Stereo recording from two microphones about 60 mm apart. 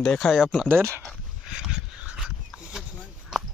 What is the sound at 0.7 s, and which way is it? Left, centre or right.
Speech, right.